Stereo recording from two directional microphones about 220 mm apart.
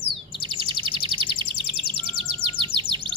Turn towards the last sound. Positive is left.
turn(degrees=-20)  # may be behind; listen again after turning